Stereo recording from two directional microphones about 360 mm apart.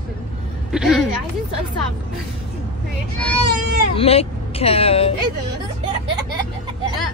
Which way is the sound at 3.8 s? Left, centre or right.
Centre.